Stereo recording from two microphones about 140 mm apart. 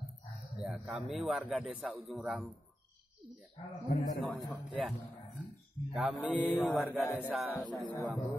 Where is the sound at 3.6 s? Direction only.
35° left (ahead or behind).